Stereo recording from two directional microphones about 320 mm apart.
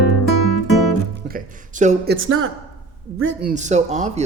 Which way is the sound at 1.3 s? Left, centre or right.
Right.